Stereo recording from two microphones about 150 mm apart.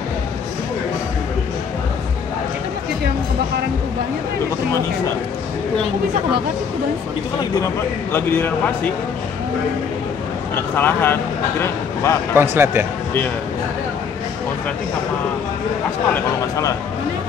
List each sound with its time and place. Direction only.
8.1 s speech: 15° left (ahead or behind)
10.5 s speech: 15° left (ahead or behind)
12.4 s speech: 15° right (ahead or behind)
16.1 s speech: 20° left (ahead or behind)